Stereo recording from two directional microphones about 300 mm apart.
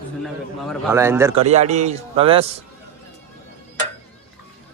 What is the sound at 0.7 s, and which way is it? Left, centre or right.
Speech, centre.